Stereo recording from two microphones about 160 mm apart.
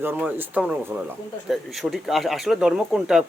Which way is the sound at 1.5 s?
Centre (ahead or behind).